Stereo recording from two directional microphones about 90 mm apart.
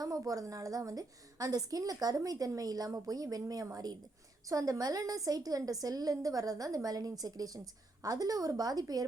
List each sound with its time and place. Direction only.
0.3 s a woman's voice: 40° right (ahead or behind)